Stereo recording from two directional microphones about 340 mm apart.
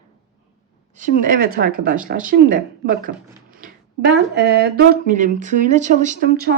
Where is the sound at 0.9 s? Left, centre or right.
Right.